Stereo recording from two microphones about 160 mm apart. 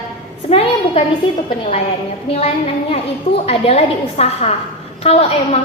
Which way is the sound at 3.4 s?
40° left (ahead or behind).